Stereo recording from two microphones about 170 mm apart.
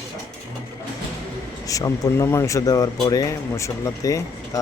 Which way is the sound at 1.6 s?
20° left (ahead or behind).